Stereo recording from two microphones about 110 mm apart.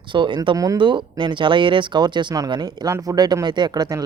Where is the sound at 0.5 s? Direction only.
30° right (ahead or behind).